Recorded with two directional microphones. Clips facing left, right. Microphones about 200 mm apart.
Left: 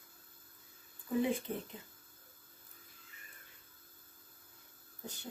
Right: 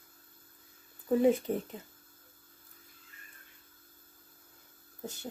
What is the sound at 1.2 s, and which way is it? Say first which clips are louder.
Speech: right 8 dB; 40° right (ahead or behind).